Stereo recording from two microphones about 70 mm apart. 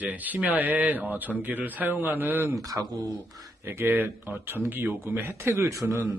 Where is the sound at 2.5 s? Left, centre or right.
Right.